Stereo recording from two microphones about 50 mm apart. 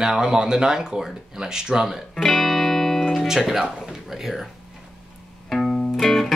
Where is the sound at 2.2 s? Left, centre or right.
Centre.